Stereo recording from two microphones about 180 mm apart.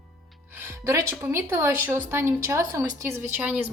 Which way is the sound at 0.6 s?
15° right (ahead or behind).